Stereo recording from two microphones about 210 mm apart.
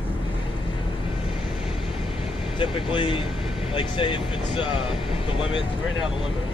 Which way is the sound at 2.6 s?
25° left (ahead or behind).